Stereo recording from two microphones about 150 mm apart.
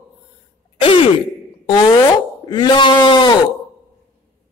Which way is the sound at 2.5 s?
30° left (ahead or behind).